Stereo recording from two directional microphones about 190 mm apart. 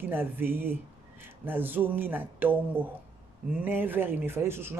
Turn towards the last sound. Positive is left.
turn(degrees=-10)  # may be behind; listen again after turning